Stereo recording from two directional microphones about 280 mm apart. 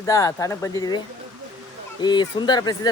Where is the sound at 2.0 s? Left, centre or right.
Centre.